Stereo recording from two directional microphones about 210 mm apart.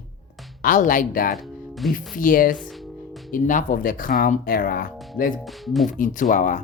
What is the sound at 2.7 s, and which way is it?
Music, centre (ahead or behind).